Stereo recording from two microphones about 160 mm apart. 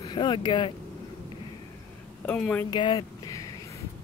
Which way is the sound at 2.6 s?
30° left (ahead or behind).